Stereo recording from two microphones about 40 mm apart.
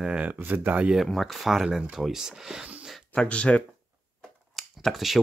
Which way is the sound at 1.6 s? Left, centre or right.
Centre.